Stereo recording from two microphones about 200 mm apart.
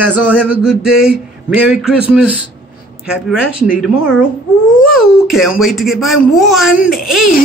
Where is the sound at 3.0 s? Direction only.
5° right (ahead or behind).